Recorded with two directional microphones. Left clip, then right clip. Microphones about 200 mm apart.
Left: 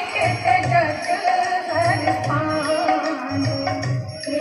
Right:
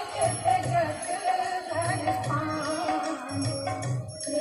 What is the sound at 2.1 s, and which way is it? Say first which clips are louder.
Music: left 7 dB; 35° left (ahead or behind).